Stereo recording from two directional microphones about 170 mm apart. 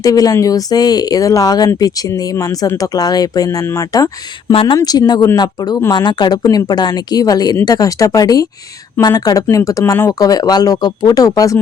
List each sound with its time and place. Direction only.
0.0 s speech: 20° left (ahead or behind)